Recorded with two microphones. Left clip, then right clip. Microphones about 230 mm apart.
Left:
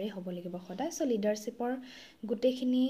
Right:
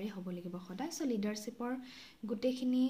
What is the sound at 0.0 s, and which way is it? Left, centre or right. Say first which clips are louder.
Speech: left 6 dB; centre.